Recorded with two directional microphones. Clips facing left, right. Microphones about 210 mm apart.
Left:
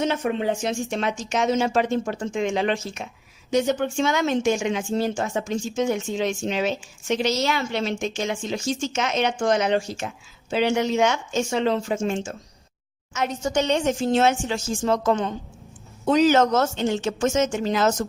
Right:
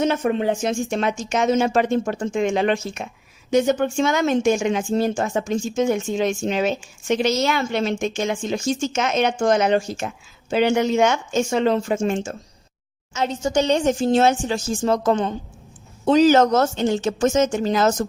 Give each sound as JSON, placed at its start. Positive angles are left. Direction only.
{"t": 0.0, "sound": "speech", "side_deg": -45}
{"t": 13.1, "sound": "a woman's voice", "side_deg": -30}